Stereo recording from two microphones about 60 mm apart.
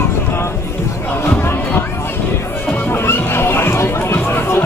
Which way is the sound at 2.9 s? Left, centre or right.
Left.